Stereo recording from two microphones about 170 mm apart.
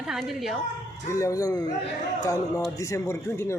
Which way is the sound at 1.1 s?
20° left (ahead or behind).